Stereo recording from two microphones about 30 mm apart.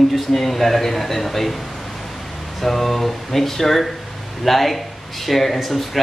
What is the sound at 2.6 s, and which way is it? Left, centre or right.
Speech, centre.